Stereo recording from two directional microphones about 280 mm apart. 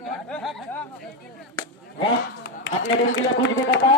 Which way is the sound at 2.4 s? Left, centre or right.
Left.